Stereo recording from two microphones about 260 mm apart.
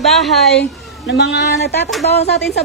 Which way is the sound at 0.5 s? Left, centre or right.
Left.